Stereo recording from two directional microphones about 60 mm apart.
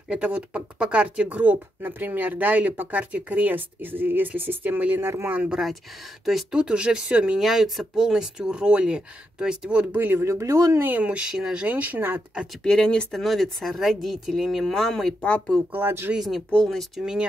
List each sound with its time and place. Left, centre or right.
0.1 s speech: right
5.5 s speech: centre
6.5 s speech: centre
7.3 s speech: centre
9.9 s speech: right
10.2 s speech: right
10.8 s speech: right
11.1 s speech: centre
11.6 s speech: right
12.6 s speech: centre
15.7 s speech: right
16.2 s speech: centre